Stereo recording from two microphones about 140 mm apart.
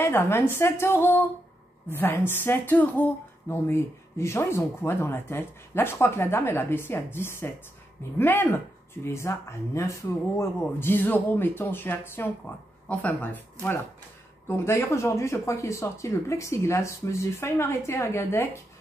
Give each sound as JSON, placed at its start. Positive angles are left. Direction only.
{"t": 0.0, "sound": "speech", "side_deg": 20}